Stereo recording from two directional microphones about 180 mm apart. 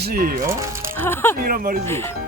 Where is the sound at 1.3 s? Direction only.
50° right (ahead or behind).